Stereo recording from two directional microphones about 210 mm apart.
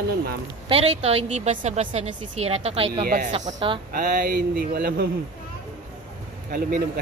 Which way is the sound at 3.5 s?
25° right (ahead or behind).